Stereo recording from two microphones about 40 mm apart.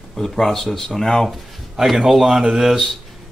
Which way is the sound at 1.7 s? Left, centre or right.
Centre.